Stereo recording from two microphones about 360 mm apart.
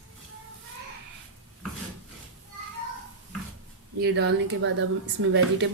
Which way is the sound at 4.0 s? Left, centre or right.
Right.